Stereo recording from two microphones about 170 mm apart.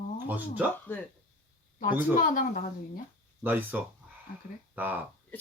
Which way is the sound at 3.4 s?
10° right (ahead or behind).